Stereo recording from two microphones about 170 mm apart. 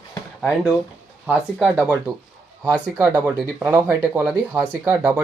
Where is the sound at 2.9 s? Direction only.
20° right (ahead or behind).